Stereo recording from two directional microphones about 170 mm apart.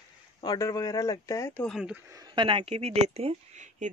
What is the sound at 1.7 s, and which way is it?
Speech, 5° right (ahead or behind).